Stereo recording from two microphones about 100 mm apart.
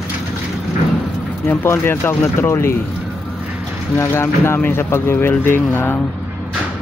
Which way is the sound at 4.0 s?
25° left (ahead or behind).